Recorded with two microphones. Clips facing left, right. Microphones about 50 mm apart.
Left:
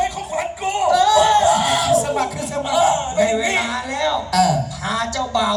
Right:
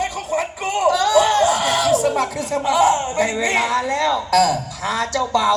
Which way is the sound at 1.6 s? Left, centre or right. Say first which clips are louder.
Even; right.